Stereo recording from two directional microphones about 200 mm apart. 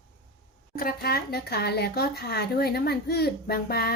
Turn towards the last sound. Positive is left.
turn(degrees=50)  # may be behind; listen again after turning